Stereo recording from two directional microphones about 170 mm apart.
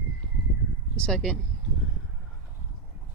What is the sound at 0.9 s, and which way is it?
Speech, 5° left (ahead or behind).